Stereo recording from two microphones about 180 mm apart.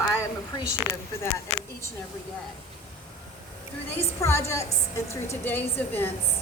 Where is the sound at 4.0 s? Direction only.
15° left (ahead or behind).